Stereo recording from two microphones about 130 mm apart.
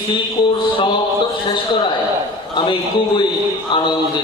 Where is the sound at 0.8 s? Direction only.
40° left (ahead or behind).